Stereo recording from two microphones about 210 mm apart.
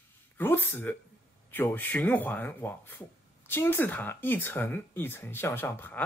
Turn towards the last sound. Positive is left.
turn(degrees=10)  # may be behind; listen again after turning